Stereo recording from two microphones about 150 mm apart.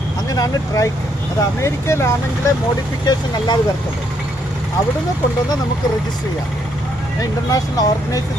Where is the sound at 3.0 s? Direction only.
30° left (ahead or behind).